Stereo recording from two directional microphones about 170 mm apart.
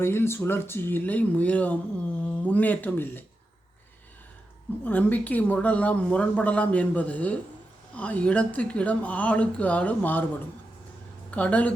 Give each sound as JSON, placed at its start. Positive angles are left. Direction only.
{"t": 0.0, "sound": "a woman's voice", "side_deg": 15}
{"t": 4.9, "sound": "a woman's voice", "side_deg": 10}
{"t": 11.3, "sound": "speech", "side_deg": 10}